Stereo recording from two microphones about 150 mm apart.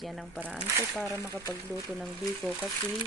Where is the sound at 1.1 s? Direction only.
20° left (ahead or behind).